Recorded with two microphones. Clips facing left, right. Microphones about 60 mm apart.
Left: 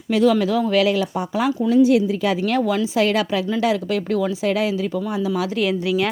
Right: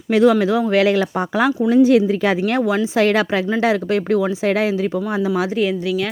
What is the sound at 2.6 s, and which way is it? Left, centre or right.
Speech, right.